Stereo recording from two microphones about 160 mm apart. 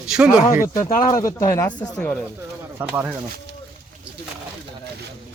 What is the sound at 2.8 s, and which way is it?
Speech, 10° right (ahead or behind).